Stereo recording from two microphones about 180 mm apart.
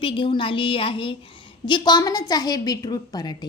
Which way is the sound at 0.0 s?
30° left (ahead or behind).